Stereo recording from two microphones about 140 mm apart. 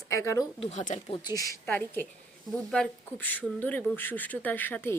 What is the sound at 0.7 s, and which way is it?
Speech, 60° left (ahead or behind).